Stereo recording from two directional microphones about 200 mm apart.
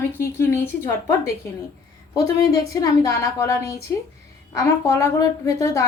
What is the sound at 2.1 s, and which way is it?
A woman's voice, 15° left (ahead or behind).